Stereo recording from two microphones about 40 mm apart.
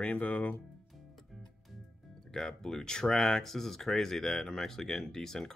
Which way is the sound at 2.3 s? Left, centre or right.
Centre.